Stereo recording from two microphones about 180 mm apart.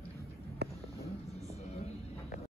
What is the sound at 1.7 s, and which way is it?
Music, 35° left (ahead or behind).